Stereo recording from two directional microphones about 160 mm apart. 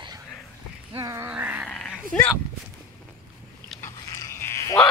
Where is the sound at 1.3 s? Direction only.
10° right (ahead or behind).